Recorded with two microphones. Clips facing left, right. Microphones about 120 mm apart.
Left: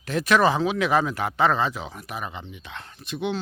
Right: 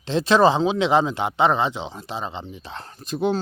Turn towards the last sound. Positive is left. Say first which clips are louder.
# right 5 dB
turn(degrees=-40)  # may be behind; listen again after turning